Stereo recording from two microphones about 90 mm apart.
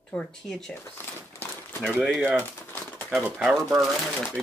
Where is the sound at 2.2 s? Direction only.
20° right (ahead or behind).